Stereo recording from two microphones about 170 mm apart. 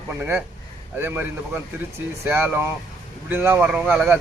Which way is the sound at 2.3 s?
10° right (ahead or behind).